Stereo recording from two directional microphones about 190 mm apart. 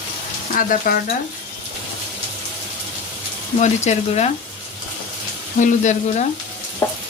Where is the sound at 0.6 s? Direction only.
50° left (ahead or behind).